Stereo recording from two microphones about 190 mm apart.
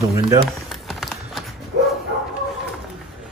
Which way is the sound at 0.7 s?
Centre (ahead or behind).